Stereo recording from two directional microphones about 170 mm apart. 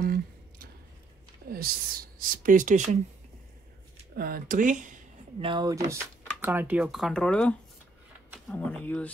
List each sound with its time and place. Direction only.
0.0 s a sound: 60° right (ahead or behind)
1.5 s speech: 60° right (ahead or behind)
4.1 s speech: 60° right (ahead or behind)
5.4 s speech: 25° right (ahead or behind)
6.4 s speech: 10° right (ahead or behind); by 9.1 s 10° left (ahead or behind)